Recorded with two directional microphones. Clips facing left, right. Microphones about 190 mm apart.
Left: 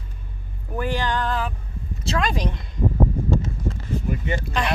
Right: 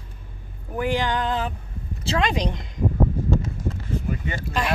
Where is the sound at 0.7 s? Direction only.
15° right (ahead or behind).